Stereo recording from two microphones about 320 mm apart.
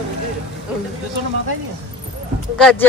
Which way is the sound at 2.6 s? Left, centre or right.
Centre.